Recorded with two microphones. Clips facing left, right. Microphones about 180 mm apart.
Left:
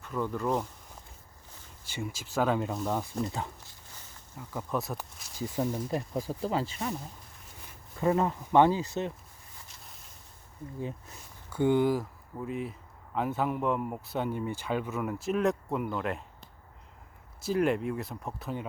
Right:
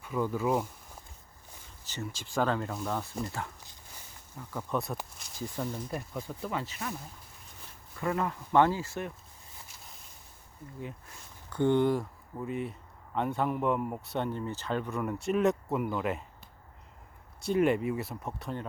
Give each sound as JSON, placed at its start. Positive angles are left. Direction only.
{"t": 0.0, "sound": "speech", "side_deg": -10}
{"t": 1.8, "sound": "speech", "side_deg": 10}
{"t": 4.4, "sound": "speech", "side_deg": 5}
{"t": 5.4, "sound": "speech", "side_deg": 20}
{"t": 7.9, "sound": "speech", "side_deg": 25}
{"t": 11.5, "sound": "speech", "side_deg": 5}
{"t": 17.4, "sound": "speech", "side_deg": 0}